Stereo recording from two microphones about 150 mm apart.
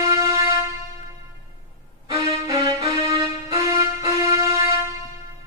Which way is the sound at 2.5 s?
20° right (ahead or behind).